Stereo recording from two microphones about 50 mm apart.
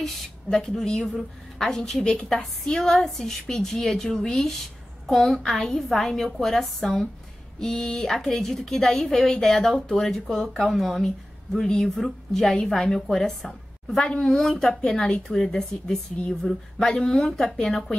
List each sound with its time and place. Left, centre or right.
0.0 s a woman's voice: centre